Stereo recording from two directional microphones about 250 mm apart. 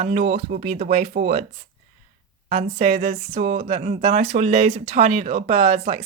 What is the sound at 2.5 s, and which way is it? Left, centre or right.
Speech, right.